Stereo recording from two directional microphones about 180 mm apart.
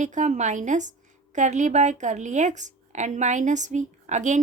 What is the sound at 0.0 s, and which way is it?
A woman's voice, 45° right (ahead or behind).